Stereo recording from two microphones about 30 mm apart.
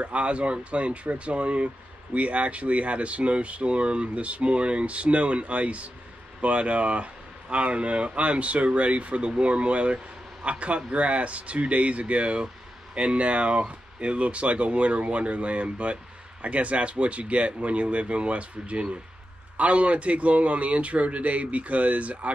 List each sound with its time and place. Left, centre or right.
0.0 s speech: right